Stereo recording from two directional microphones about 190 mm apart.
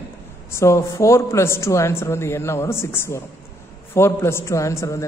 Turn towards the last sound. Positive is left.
turn(degrees=15)  # may be behind; listen again after turning